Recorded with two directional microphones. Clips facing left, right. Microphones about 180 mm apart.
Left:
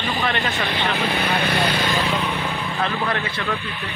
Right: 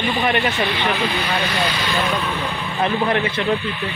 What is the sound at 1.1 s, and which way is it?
Speech, 55° left (ahead or behind).